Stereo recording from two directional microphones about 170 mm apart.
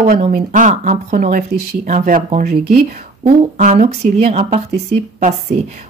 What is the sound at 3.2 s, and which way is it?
Speech, 45° right (ahead or behind).